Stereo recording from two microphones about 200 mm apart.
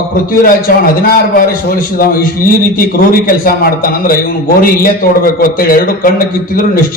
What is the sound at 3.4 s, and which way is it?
A man's voice, 45° left (ahead or behind).